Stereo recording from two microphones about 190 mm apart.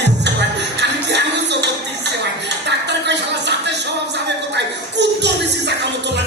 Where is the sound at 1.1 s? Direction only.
65° right (ahead or behind).